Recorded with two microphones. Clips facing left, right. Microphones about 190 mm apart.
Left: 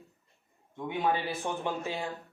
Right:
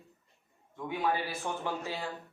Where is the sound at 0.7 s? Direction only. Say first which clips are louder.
Left 2 dB; 20° left (ahead or behind).